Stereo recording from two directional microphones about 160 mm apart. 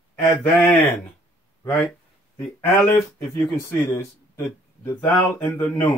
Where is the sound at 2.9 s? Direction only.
20° left (ahead or behind).